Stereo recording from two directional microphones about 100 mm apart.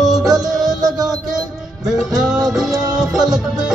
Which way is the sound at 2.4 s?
5° right (ahead or behind).